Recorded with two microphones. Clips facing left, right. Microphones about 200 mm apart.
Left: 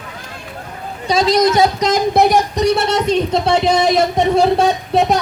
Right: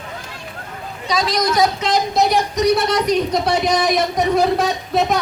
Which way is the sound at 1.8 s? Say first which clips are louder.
Left 4 dB; 45° left (ahead or behind).